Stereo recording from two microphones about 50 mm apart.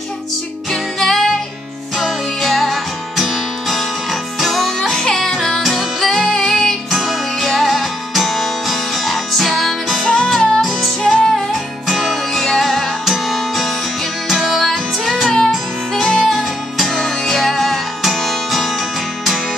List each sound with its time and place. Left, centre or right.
0.7 s music: centre
5.6 s music: centre
5.9 s music: centre
6.2 s music: centre
6.9 s music: centre
10.0 s music: left
10.6 s music: centre
13.0 s music: centre
15.2 s music: centre